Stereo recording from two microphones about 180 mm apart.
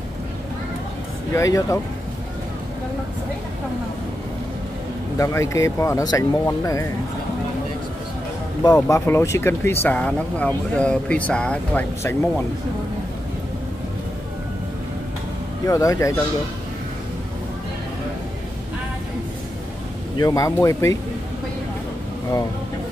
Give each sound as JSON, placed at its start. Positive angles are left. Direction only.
{"t": 1.3, "sound": "speech", "side_deg": 15}
{"t": 5.1, "sound": "speech", "side_deg": 15}
{"t": 8.7, "sound": "speech", "side_deg": 15}
{"t": 15.6, "sound": "speech", "side_deg": 20}
{"t": 20.2, "sound": "speech", "side_deg": 20}